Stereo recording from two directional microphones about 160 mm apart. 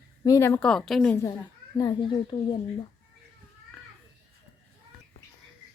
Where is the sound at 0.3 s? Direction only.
15° left (ahead or behind).